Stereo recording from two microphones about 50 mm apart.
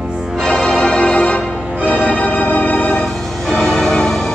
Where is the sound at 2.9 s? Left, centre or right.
Centre.